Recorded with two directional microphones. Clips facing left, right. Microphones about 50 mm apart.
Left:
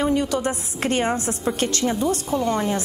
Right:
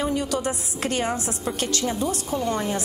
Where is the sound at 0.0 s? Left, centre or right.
Left.